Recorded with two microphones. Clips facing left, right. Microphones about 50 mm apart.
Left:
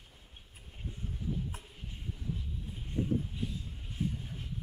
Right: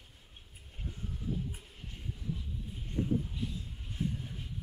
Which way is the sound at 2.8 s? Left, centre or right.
Centre.